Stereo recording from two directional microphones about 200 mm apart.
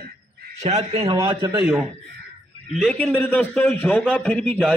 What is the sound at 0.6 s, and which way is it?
Speech, 35° right (ahead or behind).